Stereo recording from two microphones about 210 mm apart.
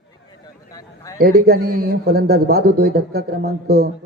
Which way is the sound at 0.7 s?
15° left (ahead or behind).